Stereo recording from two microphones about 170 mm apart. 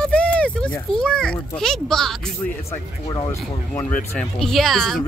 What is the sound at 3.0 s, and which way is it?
Speech, 20° left (ahead or behind).